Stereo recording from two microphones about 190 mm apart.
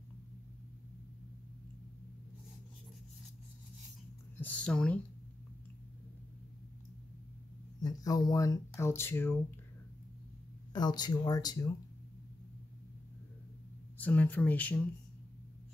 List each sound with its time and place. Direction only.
4.4 s speech: 5° left (ahead or behind)
7.8 s speech: 20° left (ahead or behind)
10.7 s speech: 20° left (ahead or behind)
13.9 s speech: 10° left (ahead or behind)